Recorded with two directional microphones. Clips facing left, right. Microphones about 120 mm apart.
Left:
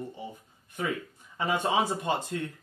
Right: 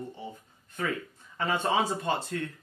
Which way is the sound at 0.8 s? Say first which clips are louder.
Even; 15° left (ahead or behind).